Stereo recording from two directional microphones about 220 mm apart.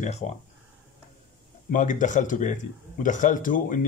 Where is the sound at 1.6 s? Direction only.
35° left (ahead or behind).